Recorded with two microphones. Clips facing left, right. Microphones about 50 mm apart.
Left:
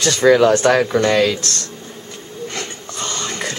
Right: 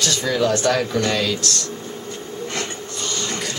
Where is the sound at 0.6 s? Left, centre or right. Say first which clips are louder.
Left 5 dB; left.